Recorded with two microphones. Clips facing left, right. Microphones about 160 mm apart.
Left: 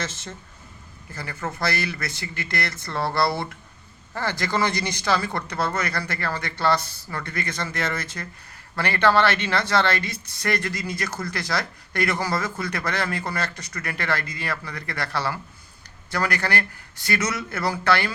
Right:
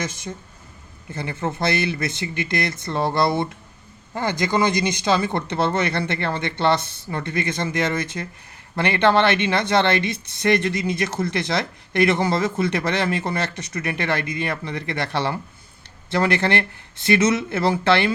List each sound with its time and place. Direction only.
0.0 s speech: 15° right (ahead or behind)